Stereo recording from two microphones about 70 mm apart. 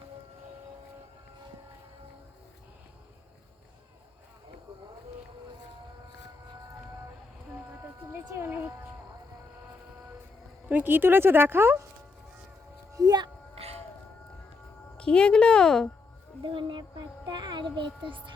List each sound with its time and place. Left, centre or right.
8.4 s a sound: right
10.7 s speech: right
12.9 s music: right
14.9 s speech: centre
16.7 s speech: right